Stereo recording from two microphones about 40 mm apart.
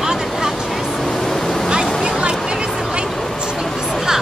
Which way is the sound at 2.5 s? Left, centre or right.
Right.